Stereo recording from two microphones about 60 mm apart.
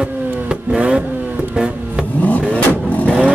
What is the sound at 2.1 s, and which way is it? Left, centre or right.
Vehicle, left.